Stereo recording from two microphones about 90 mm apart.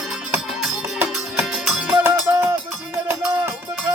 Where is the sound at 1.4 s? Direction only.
5° right (ahead or behind).